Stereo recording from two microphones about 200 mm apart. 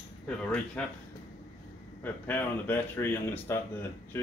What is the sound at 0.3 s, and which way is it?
Speech, 5° left (ahead or behind).